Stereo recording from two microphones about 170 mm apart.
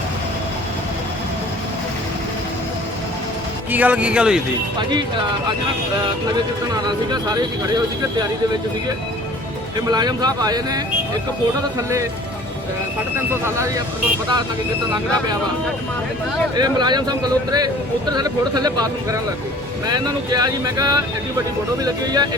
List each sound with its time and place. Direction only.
3.7 s speech: 10° right (ahead or behind)
6.8 s speech: 25° right (ahead or behind)
9.9 s speech: 25° right (ahead or behind)
13.3 s speech: 15° right (ahead or behind)
16.6 s speech: 25° right (ahead or behind)